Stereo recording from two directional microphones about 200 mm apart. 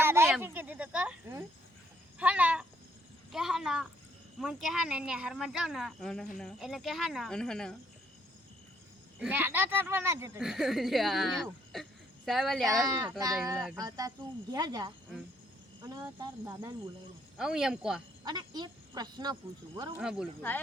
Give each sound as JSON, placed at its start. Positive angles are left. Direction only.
{"t": 0.0, "sound": "a sound", "side_deg": -10}
{"t": 4.4, "sound": "speech", "side_deg": 0}
{"t": 9.2, "sound": "speech", "side_deg": -10}
{"t": 12.8, "sound": "speech", "side_deg": -15}
{"t": 17.3, "sound": "speech", "side_deg": -5}
{"t": 18.3, "sound": "speech", "side_deg": -20}
{"t": 20.0, "sound": "speech", "side_deg": -5}